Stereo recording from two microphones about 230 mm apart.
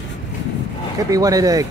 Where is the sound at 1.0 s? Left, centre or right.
Centre.